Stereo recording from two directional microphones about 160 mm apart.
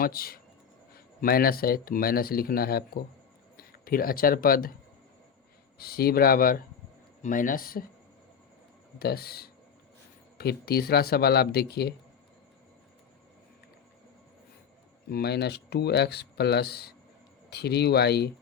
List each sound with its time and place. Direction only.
0.0 s speech: 70° left (ahead or behind)
5.7 s speech: 70° left (ahead or behind)
9.0 s speech: 75° left (ahead or behind)
15.1 s speech: 90° left